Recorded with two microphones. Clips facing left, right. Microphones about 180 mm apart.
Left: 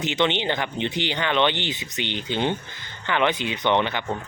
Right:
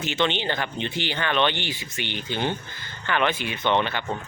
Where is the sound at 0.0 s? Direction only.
20° left (ahead or behind).